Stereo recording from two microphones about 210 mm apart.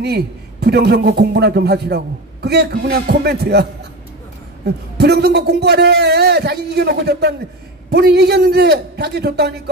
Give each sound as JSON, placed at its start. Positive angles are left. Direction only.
{"t": 0.0, "sound": "a man's voice", "side_deg": -50}
{"t": 4.9, "sound": "a man's voice", "side_deg": -50}